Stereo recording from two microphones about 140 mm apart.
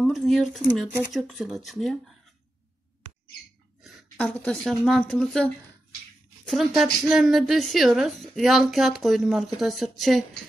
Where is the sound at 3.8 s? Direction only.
5° left (ahead or behind).